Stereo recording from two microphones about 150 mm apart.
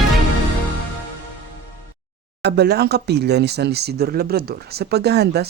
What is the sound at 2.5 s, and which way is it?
Speech, 90° right.